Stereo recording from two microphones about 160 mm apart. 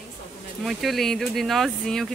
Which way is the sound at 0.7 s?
Centre (ahead or behind).